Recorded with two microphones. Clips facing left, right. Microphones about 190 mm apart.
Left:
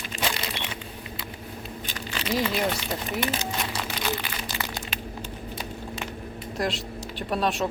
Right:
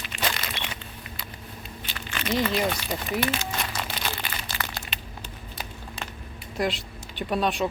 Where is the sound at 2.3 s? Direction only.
Centre (ahead or behind).